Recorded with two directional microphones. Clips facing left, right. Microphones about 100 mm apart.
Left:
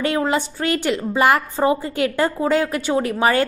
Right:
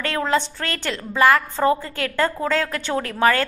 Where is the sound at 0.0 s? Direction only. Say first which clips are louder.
Left 2 dB; 15° left (ahead or behind).